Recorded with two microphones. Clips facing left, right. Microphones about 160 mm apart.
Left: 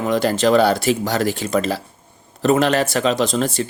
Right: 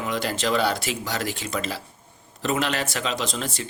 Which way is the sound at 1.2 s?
35° left (ahead or behind).